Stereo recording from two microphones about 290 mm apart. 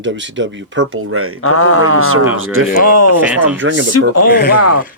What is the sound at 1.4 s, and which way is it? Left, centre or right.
Speech, left.